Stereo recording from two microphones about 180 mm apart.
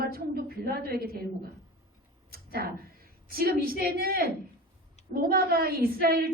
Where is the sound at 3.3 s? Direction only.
55° right (ahead or behind).